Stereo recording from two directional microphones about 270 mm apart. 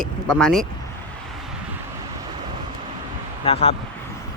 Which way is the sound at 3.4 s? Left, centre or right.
Left.